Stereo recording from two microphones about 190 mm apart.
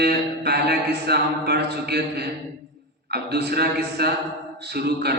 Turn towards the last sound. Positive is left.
turn(degrees=-55)  # may be behind; listen again after turning